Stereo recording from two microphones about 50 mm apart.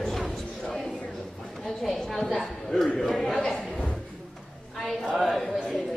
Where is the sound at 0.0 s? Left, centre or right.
Centre.